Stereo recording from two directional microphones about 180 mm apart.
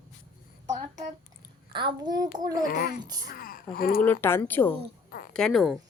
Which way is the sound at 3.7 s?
55° left (ahead or behind).